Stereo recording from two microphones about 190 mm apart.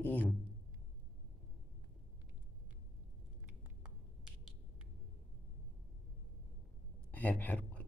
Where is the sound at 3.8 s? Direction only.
5° right (ahead or behind).